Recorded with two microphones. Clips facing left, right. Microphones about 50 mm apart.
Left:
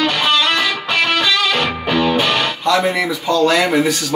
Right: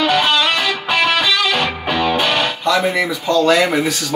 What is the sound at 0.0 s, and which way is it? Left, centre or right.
Music, centre.